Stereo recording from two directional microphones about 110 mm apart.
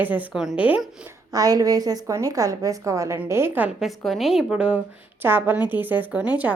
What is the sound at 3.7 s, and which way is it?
A woman's voice, centre (ahead or behind).